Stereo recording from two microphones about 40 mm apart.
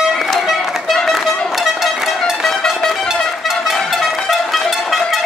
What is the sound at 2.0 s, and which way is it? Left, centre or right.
Music, centre.